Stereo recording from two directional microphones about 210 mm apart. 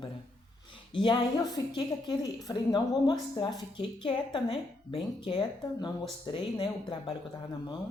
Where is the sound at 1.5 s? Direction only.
20° left (ahead or behind).